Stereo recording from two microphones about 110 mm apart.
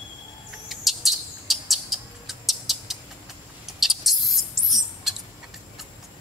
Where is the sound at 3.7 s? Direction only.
Centre (ahead or behind).